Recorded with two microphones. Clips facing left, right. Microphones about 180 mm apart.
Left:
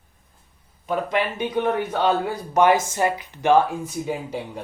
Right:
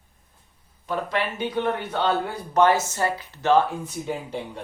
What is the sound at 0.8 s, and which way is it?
A man's voice, 15° left (ahead or behind).